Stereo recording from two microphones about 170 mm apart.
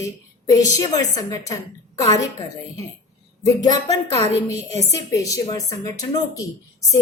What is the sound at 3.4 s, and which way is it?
A woman's voice, 20° left (ahead or behind).